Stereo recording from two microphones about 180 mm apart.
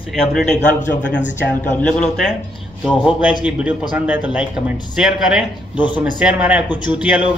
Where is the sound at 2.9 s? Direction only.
5° right (ahead or behind).